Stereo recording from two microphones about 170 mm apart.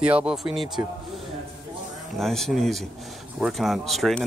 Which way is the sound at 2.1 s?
Centre (ahead or behind).